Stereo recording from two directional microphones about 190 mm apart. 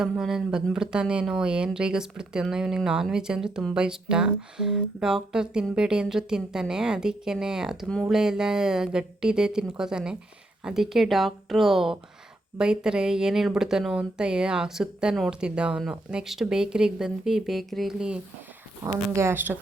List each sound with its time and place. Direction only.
0.0 s speech: 5° right (ahead or behind)